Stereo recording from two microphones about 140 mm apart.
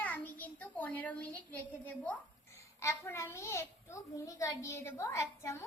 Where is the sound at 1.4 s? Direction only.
10° left (ahead or behind).